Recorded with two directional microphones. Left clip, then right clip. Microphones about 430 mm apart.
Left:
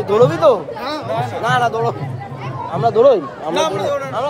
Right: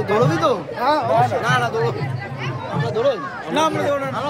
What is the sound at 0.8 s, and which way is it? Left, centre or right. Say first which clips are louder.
Speech: right 5 dB; centre.